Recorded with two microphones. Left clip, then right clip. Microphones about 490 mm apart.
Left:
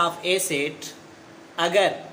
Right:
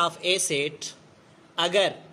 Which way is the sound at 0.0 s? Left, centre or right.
Right.